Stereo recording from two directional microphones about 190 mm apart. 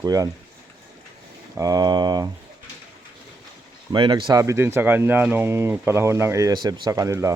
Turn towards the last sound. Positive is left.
turn(degrees=-15)  # may be behind; listen again after turning